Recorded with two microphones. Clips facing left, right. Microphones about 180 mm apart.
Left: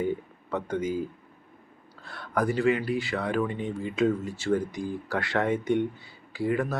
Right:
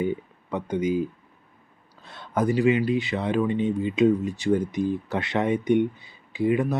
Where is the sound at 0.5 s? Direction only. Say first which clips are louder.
Right 4 dB; 20° right (ahead or behind).